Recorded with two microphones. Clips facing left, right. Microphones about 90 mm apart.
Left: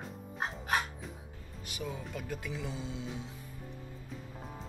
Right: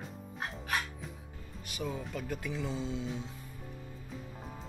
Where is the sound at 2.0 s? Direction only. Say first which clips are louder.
Right 2 dB; centre (ahead or behind).